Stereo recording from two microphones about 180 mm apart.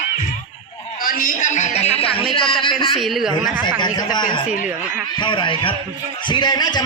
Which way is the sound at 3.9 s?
25° left (ahead or behind).